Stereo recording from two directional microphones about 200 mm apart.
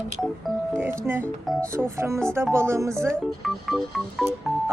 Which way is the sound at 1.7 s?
15° right (ahead or behind).